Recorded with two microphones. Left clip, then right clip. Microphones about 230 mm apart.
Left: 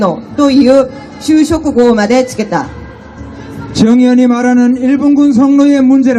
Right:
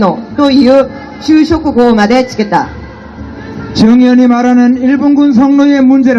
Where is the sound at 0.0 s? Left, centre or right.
Left.